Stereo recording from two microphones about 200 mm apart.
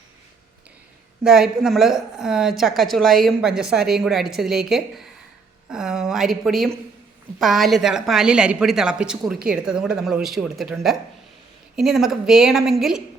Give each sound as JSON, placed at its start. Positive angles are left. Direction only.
{"t": 1.2, "sound": "a woman's voice", "side_deg": 0}
{"t": 9.3, "sound": "a woman's voice", "side_deg": -45}
{"t": 9.6, "sound": "a woman's voice", "side_deg": -5}